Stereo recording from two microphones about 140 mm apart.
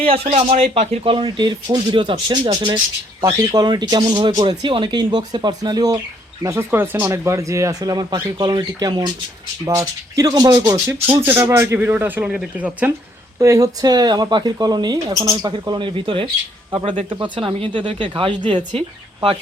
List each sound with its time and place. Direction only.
0.0 s a man's voice: 45° right (ahead or behind); by 12.9 s 10° right (ahead or behind)
13.4 s a woman's voice: 25° right (ahead or behind); by 19.4 s 45° right (ahead or behind)